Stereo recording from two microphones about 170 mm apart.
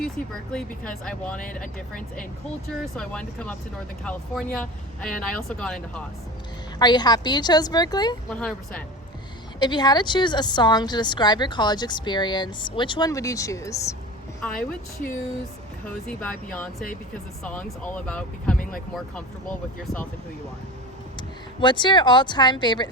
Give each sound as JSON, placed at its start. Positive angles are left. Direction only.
{"t": 0.2, "sound": "speech", "side_deg": 50}
{"t": 0.5, "sound": "speech", "side_deg": 5}
{"t": 2.8, "sound": "speech", "side_deg": 5}
{"t": 6.7, "sound": "a woman's voice", "side_deg": 25}
{"t": 8.3, "sound": "speech", "side_deg": 5}
{"t": 9.6, "sound": "a woman's voice", "side_deg": 25}
{"t": 16.0, "sound": "speech", "side_deg": 5}
{"t": 18.5, "sound": "speech", "side_deg": 50}
{"t": 18.9, "sound": "speech", "side_deg": 5}
{"t": 21.2, "sound": "a woman's voice", "side_deg": 25}